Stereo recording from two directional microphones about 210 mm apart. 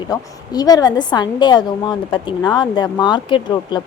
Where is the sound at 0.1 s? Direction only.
20° left (ahead or behind).